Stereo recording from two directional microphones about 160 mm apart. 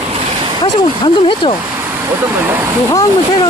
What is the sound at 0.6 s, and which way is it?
Speech, 30° left (ahead or behind).